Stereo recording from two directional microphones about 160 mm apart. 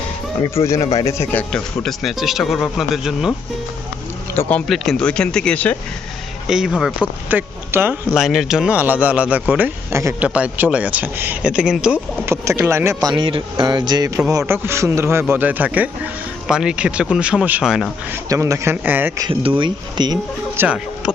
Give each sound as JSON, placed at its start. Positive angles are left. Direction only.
{"t": 0.6, "sound": "speech", "side_deg": 20}
{"t": 4.4, "sound": "speech", "side_deg": 10}
{"t": 6.5, "sound": "speech", "side_deg": -5}
{"t": 8.2, "sound": "speech", "side_deg": 0}
{"t": 12.3, "sound": "speech", "side_deg": -15}
{"t": 18.1, "sound": "speech", "side_deg": -20}
{"t": 19.2, "sound": "speech", "side_deg": -35}
{"t": 20.6, "sound": "speech", "side_deg": -5}